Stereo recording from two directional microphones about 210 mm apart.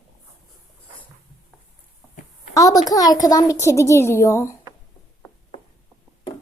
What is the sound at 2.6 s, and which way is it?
A child's voice, 15° left (ahead or behind).